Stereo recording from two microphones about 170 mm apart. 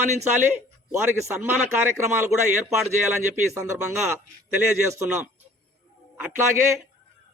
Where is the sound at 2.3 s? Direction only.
Centre (ahead or behind).